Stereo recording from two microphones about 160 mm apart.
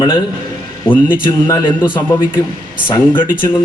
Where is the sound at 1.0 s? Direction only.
25° left (ahead or behind).